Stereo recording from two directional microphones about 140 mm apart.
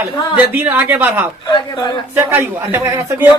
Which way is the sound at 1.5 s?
35° left (ahead or behind).